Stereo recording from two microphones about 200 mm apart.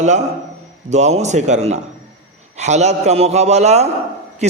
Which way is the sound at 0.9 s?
35° right (ahead or behind).